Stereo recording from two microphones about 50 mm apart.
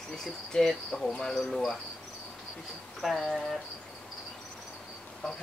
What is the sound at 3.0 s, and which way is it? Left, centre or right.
Cricket, centre.